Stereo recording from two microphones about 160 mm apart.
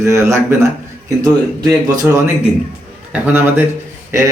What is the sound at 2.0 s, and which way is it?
Speech, 15° right (ahead or behind).